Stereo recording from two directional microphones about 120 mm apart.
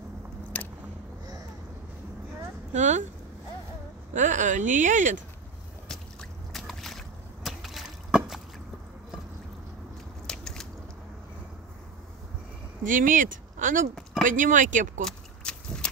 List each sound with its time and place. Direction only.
0.5 s vehicle: 15° left (ahead or behind)
2.7 s speech: 80° right
4.1 s speech: 90° right
6.5 s boat: centre (ahead or behind)
10.2 s biting: 5° left (ahead or behind)
12.8 s speech: 90° right
15.0 s horse: 5° left (ahead or behind)